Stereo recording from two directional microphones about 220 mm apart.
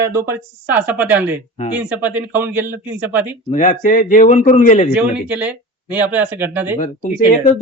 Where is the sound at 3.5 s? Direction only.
35° left (ahead or behind).